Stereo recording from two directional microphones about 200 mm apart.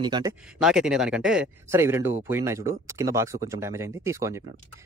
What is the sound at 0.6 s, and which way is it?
Speech, 5° right (ahead or behind).